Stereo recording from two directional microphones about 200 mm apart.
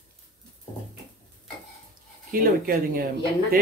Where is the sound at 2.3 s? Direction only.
45° right (ahead or behind).